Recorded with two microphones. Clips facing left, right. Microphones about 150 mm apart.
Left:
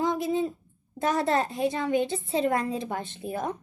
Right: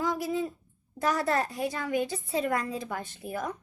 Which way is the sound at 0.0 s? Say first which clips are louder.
Left 3 dB; 25° left (ahead or behind).